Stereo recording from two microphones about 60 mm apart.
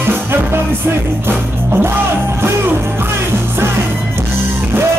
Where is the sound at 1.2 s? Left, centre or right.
Right.